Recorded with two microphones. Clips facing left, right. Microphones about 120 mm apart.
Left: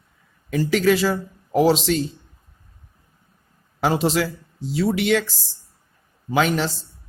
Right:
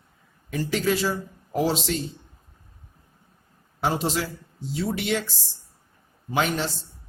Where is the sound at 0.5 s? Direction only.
90° left.